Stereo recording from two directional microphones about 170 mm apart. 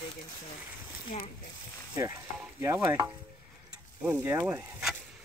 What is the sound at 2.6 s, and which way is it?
Speech, 15° right (ahead or behind).